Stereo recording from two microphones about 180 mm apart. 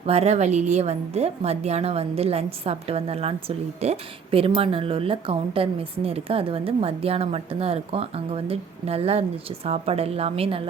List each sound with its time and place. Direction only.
0.0 s speech: 35° right (ahead or behind)